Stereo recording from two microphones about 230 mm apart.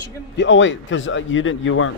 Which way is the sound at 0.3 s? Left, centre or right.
Left.